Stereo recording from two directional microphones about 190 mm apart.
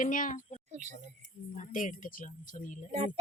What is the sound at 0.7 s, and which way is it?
Speech, 40° right (ahead or behind).